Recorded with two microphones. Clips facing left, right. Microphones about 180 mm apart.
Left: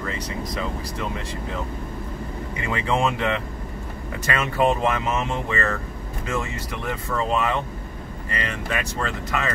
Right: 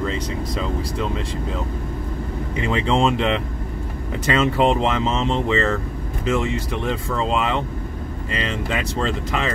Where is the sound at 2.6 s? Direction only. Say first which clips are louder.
Right 4 dB; 20° right (ahead or behind).